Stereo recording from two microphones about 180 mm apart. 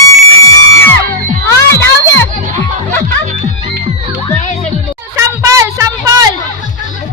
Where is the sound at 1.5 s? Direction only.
15° left (ahead or behind).